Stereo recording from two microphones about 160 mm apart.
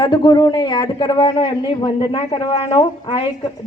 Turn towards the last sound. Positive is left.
turn(degrees=30)  # may be behind; listen again after turning